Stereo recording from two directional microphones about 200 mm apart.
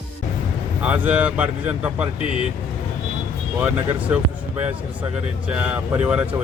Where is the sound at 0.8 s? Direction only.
5° right (ahead or behind).